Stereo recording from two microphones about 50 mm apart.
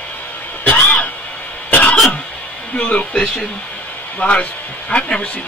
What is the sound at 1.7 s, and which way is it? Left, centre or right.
Cough, left.